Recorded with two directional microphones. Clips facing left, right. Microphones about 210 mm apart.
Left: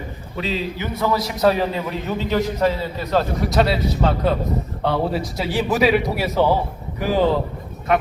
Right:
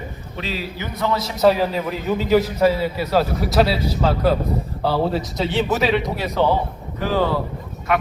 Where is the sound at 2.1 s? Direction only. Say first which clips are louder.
Right 5 dB; 5° right (ahead or behind).